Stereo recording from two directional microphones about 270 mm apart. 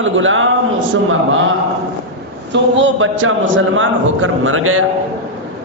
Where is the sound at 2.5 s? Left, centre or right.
Right.